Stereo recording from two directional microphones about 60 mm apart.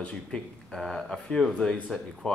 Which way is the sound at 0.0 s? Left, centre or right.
Centre.